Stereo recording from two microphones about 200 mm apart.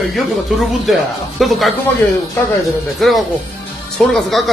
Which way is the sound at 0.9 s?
Centre (ahead or behind).